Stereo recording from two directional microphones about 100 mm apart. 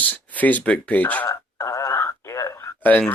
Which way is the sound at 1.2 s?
30° left (ahead or behind).